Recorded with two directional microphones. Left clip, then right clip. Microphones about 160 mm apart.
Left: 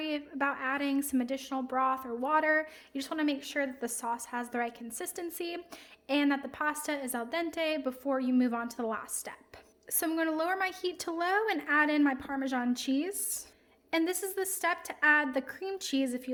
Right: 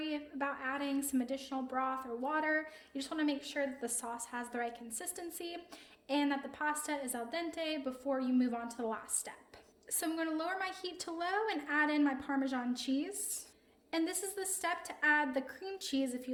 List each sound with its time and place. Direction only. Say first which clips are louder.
0.0 s a woman's voice: left 6 dB; 55° left (ahead or behind)